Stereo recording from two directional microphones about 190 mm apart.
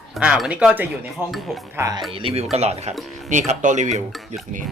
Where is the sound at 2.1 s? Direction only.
30° right (ahead or behind).